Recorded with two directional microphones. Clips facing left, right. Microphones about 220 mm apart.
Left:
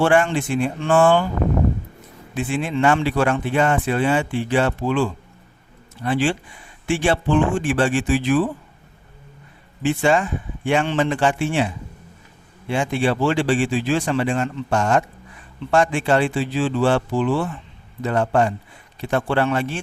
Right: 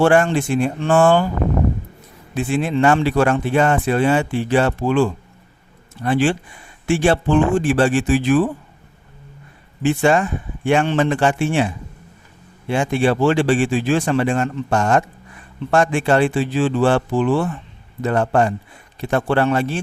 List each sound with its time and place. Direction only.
0.0 s speech: 40° right (ahead or behind)
2.3 s speech: 40° right (ahead or behind)
9.8 s speech: 45° right (ahead or behind)
12.7 s speech: 45° right (ahead or behind)